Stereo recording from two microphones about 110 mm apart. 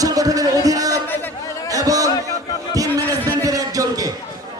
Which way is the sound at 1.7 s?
30° right (ahead or behind).